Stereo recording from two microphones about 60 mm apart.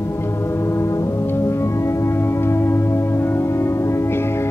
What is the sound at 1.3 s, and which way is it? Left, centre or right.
Music, left.